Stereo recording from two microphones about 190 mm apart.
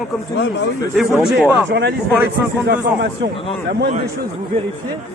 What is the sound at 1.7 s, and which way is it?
Speech, 65° right (ahead or behind).